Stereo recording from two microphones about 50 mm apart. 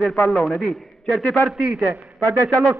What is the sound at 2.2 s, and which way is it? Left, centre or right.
Speech, right.